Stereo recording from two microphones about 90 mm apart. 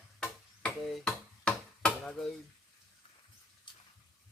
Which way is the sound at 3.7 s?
60° left (ahead or behind).